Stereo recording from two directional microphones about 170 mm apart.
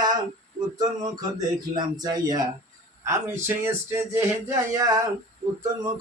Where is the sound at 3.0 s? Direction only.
15° right (ahead or behind).